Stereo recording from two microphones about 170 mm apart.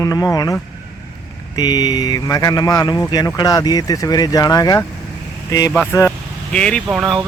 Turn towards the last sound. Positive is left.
turn(degrees=-5)  # may be behind; listen again after turning